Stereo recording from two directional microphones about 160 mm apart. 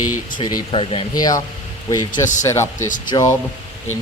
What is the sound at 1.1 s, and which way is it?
Speech, 25° left (ahead or behind).